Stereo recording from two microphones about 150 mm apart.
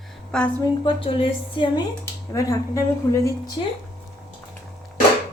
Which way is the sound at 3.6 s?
35° left (ahead or behind).